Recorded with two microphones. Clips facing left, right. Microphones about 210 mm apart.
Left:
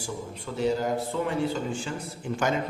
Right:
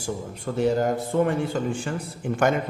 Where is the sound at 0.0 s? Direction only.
50° right (ahead or behind).